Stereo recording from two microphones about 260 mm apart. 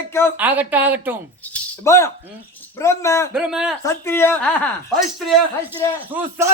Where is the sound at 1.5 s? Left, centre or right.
Centre.